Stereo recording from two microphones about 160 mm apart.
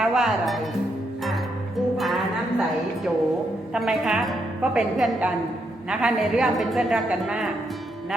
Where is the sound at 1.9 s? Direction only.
Centre (ahead or behind).